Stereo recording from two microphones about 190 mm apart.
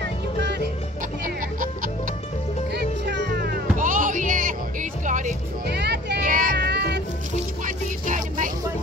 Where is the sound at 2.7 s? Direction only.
60° right (ahead or behind); by 5.3 s 40° right (ahead or behind).